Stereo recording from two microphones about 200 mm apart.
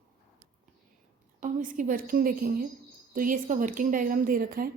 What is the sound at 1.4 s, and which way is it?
A woman's voice, 40° right (ahead or behind).